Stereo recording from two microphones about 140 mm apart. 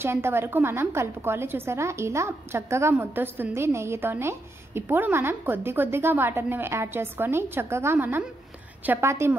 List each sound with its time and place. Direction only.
0.0 s a woman's voice: 15° right (ahead or behind)